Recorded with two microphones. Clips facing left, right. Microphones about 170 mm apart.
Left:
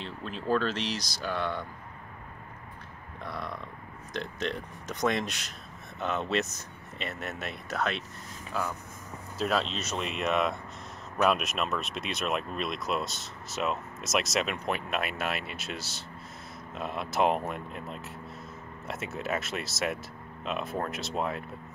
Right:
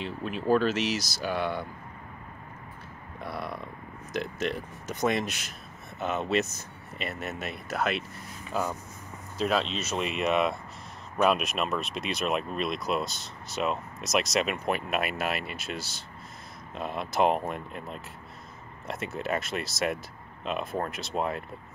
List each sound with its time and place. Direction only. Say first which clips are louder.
0.0 s speech: right 5 dB; 10° right (ahead or behind)
3.2 s speech: right 2 dB; 10° right (ahead or behind)
8.5 s speech: right 3 dB; 15° right (ahead or behind)
9.4 s speech: right 2 dB; centre (ahead or behind)